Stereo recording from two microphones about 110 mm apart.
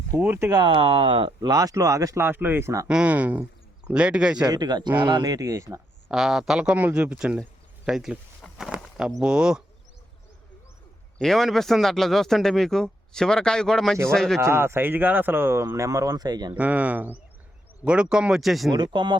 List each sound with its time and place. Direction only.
0.1 s speech: 20° right (ahead or behind)
0.6 s speech: 55° right (ahead or behind)
1.4 s speech: 35° right (ahead or behind)
2.8 s speech: 10° right (ahead or behind)
4.4 s speech: 40° right (ahead or behind)
6.1 s speech: 5° right (ahead or behind)
11.2 s speech: centre (ahead or behind)
14.4 s speech: 25° right (ahead or behind); by 16.6 s 40° right (ahead or behind)
16.6 s speech: 15° right (ahead or behind)
18.7 s speech: 45° right (ahead or behind)